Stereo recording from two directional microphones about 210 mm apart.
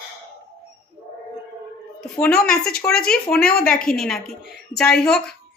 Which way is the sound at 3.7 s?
45° left (ahead or behind).